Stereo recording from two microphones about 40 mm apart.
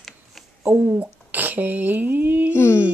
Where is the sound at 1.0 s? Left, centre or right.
Right.